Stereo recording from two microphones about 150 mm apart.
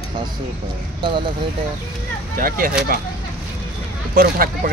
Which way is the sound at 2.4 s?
70° right (ahead or behind).